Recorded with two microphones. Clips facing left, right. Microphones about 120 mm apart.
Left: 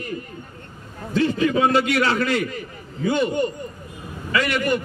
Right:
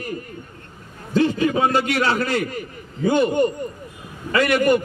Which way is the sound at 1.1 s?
35° right (ahead or behind).